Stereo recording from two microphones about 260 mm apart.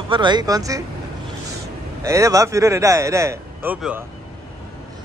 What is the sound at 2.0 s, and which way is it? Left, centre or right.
Speech, centre.